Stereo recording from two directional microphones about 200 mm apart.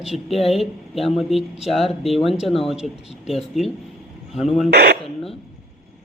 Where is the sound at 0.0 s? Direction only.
Centre (ahead or behind).